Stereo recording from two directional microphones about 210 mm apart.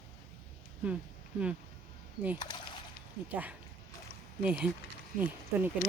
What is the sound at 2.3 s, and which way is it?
Speech, 20° left (ahead or behind).